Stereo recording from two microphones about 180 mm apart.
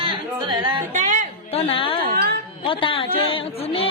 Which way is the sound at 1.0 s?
45° right (ahead or behind).